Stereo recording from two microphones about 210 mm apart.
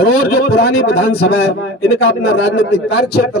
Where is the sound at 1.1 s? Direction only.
90° left.